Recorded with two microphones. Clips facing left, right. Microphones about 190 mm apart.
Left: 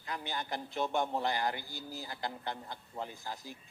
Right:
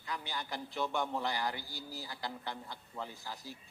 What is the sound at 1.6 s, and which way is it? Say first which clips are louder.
Speech: left 2 dB; 20° left (ahead or behind).